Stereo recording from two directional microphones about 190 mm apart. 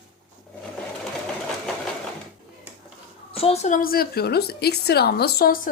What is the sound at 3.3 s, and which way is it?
A woman's voice, 30° left (ahead or behind).